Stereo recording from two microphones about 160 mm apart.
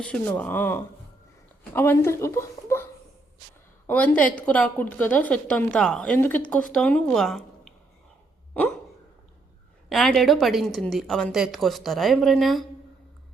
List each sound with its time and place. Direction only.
0.0 s a woman's voice: 5° left (ahead or behind)
3.8 s a woman's voice: 10° left (ahead or behind)
8.5 s hiccup: 10° left (ahead or behind)
9.9 s a woman's voice: centre (ahead or behind)